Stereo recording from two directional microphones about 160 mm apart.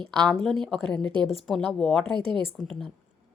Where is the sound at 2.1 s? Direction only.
30° right (ahead or behind).